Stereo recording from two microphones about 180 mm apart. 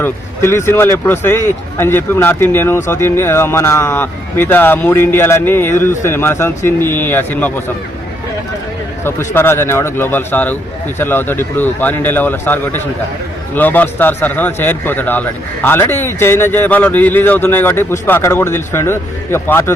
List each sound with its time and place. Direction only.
0.0 s speech: 15° left (ahead or behind)
9.0 s speech: 15° left (ahead or behind)